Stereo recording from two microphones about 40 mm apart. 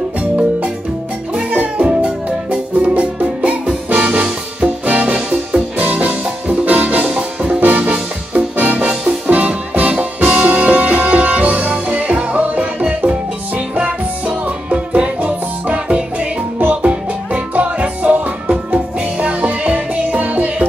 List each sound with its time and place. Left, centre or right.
1.5 s music: right
1.9 s music: right
5.1 s music: centre
5.8 s music: right